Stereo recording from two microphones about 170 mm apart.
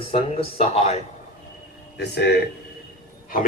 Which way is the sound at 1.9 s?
85° left.